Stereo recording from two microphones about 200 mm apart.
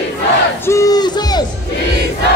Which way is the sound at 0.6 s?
15° left (ahead or behind).